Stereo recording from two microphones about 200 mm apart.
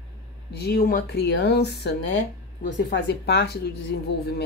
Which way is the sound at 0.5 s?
50° left (ahead or behind).